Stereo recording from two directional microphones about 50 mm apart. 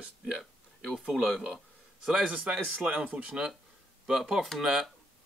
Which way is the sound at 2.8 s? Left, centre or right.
Right.